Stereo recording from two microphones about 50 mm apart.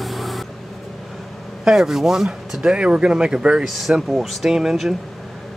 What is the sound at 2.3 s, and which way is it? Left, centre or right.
Speech, centre.